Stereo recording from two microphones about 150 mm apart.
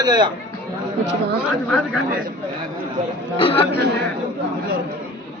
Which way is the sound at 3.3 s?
40° left (ahead or behind).